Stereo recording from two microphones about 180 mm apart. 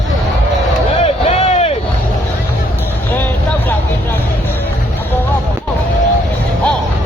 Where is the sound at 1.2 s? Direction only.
35° left (ahead or behind).